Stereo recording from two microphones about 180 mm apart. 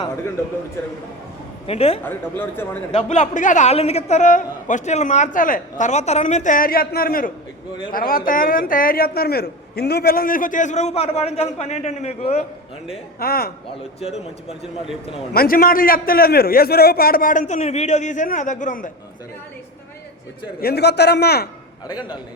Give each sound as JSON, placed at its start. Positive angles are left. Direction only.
{"t": 1.6, "sound": "speech", "side_deg": 35}
{"t": 2.0, "sound": "speech", "side_deg": 10}
{"t": 2.9, "sound": "a man's voice", "side_deg": 40}
{"t": 13.1, "sound": "a man's voice", "side_deg": 55}
{"t": 14.0, "sound": "speech", "side_deg": 35}
{"t": 15.3, "sound": "a man's voice", "side_deg": 55}
{"t": 20.6, "sound": "a man's voice", "side_deg": 60}